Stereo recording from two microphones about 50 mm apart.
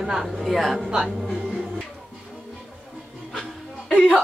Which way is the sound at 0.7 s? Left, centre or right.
Centre.